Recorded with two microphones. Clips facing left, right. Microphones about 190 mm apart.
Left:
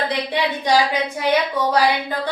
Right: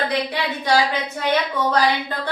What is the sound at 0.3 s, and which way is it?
A woman's voice, 15° left (ahead or behind).